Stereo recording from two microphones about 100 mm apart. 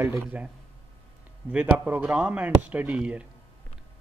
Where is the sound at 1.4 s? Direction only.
15° right (ahead or behind).